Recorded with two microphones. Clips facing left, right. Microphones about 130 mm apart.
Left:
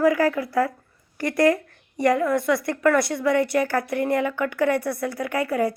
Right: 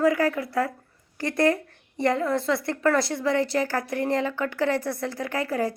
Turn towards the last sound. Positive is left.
turn(degrees=-25)  # may be behind; listen again after turning